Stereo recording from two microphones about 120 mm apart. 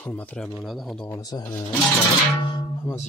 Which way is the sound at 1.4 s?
20° left (ahead or behind).